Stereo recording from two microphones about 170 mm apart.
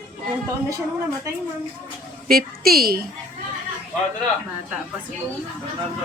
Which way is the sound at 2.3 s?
65° right (ahead or behind).